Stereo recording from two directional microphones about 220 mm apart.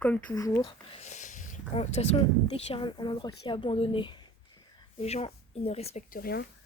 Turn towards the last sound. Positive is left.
turn(degrees=45)  # may be behind; listen again after turning